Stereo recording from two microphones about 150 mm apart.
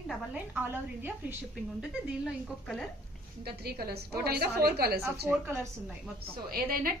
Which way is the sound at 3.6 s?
90° right.